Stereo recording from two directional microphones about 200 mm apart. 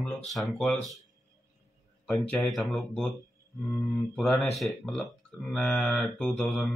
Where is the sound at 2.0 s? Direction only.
5° left (ahead or behind).